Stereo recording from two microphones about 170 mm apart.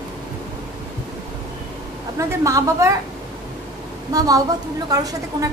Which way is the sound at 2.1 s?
20° right (ahead or behind).